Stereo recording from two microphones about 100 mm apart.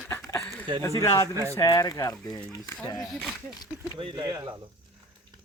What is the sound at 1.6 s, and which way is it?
Speech, 35° left (ahead or behind).